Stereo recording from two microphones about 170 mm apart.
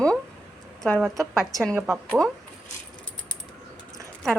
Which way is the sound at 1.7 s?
10° right (ahead or behind).